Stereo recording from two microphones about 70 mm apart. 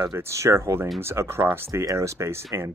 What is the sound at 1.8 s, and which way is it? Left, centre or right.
Speech, right.